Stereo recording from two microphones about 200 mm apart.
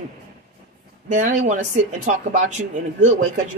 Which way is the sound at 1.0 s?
35° right (ahead or behind).